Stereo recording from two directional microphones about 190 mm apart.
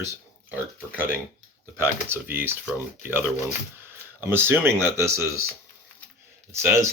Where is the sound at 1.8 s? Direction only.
10° right (ahead or behind).